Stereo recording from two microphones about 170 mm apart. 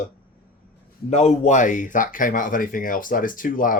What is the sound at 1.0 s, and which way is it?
Speech, 40° left (ahead or behind).